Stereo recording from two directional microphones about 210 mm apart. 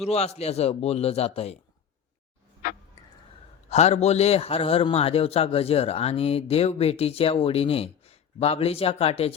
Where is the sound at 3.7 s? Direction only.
30° left (ahead or behind).